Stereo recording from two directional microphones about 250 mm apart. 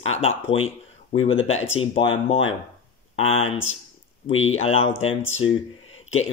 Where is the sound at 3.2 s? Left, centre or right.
Left.